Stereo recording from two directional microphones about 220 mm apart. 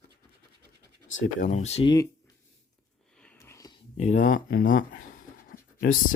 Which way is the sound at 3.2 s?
10° left (ahead or behind).